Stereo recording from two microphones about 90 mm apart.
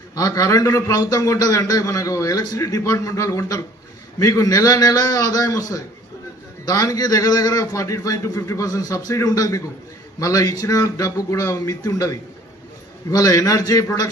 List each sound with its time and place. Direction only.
0.2 s a man's voice: 40° left (ahead or behind)